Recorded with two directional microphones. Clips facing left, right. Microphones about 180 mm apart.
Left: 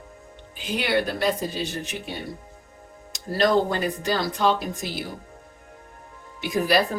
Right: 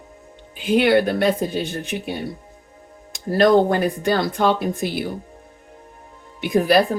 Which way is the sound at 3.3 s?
55° right (ahead or behind).